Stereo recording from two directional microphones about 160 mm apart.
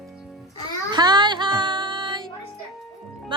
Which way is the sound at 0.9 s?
25° right (ahead or behind).